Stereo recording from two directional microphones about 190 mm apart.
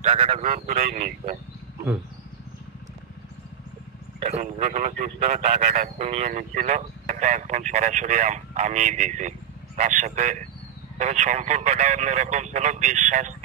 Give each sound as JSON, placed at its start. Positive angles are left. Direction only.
{"t": 0.0, "sound": "a man's voice", "side_deg": -30}
{"t": 0.5, "sound": "a man's voice", "side_deg": -40}
{"t": 4.2, "sound": "a man's voice", "side_deg": -35}